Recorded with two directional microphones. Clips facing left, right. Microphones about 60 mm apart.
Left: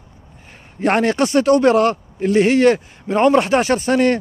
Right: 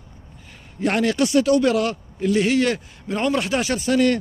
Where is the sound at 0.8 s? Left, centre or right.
Left.